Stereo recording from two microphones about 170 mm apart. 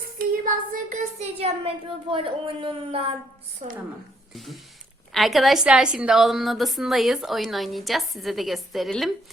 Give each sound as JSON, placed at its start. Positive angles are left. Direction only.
{"t": 0.2, "sound": "a woman's voice", "side_deg": -50}
{"t": 4.4, "sound": "a woman's voice", "side_deg": 0}